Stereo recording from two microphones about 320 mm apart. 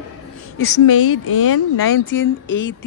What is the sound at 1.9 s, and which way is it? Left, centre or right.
Speech, left.